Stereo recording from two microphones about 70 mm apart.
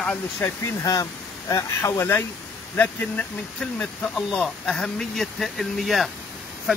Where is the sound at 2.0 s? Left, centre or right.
Left.